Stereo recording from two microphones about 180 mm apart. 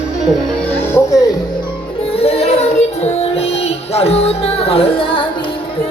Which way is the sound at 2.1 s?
35° left (ahead or behind).